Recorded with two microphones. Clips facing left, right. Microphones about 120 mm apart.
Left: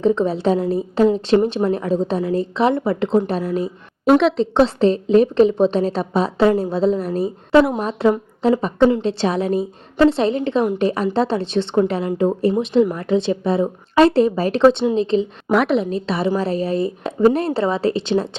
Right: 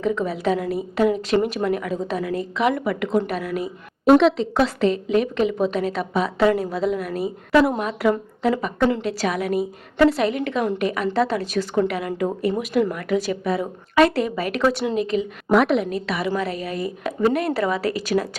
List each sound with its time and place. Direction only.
0.0 s a woman's voice: 30° left (ahead or behind)
4.0 s a woman's voice: centre (ahead or behind)
4.5 s a woman's voice: 30° left (ahead or behind)
15.4 s a woman's voice: centre (ahead or behind)
15.8 s a woman's voice: 25° left (ahead or behind)